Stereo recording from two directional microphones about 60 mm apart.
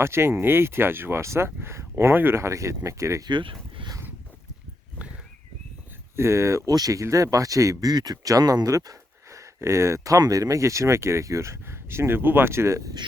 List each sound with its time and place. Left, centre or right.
0.0 s speech: right
6.1 s speech: right
6.7 s speech: right
7.0 s speech: right
10.0 s speech: right